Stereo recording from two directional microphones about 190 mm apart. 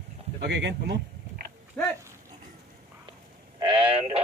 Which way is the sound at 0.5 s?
65° right (ahead or behind).